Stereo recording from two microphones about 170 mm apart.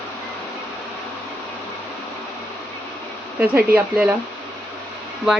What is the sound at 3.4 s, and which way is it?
Speech, 10° right (ahead or behind).